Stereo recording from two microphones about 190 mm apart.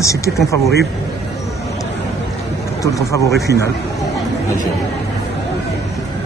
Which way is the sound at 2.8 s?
15° left (ahead or behind).